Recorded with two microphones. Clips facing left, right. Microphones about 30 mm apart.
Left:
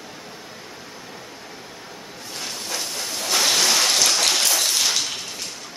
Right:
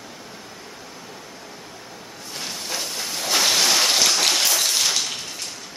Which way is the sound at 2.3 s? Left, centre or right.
Centre.